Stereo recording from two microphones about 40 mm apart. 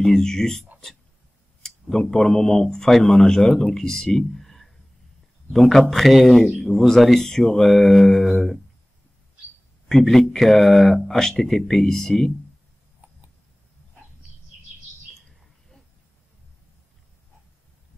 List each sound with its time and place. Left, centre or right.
0.0 s speech: centre
9.8 s speech: centre
13.0 s a sound: right